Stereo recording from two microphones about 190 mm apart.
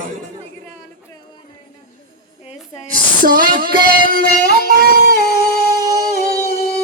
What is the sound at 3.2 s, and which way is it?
Female singing, 50° right (ahead or behind).